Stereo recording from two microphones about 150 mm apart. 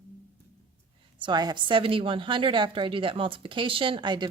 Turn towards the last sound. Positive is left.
turn(degrees=-30)  # may be behind; listen again after turning